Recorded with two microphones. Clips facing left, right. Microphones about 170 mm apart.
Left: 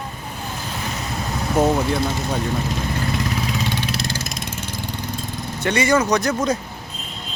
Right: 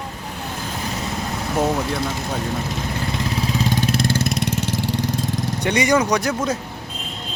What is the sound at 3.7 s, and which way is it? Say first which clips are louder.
Vehicle: right 5 dB; 45° right (ahead or behind).